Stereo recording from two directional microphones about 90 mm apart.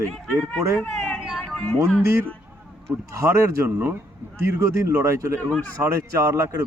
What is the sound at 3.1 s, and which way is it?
Speech, 30° right (ahead or behind).